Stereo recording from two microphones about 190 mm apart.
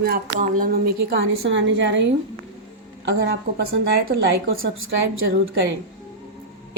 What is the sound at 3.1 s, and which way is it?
Speech, 70° right (ahead or behind).